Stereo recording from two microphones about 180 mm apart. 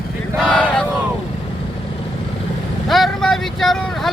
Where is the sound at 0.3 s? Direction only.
5° left (ahead or behind).